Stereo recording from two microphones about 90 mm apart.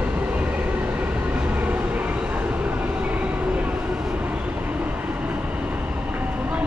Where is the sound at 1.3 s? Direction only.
15° right (ahead or behind).